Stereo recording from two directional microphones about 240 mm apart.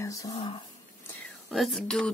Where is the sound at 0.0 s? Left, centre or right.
Centre.